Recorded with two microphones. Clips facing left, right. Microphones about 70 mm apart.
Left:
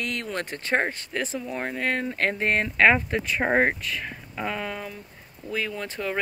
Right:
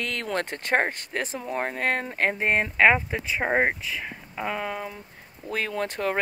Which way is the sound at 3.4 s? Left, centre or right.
Centre.